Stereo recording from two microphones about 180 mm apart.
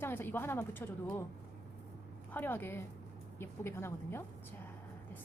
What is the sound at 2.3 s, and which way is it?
A woman's voice, 10° left (ahead or behind).